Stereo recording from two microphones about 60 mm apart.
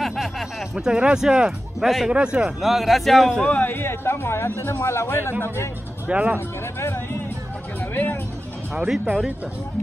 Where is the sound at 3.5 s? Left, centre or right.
Left.